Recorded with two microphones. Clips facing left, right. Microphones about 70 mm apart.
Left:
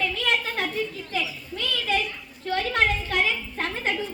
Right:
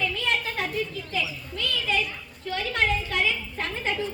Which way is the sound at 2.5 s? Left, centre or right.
Left.